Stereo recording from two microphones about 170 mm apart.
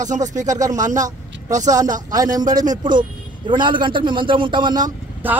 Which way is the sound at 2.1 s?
20° right (ahead or behind).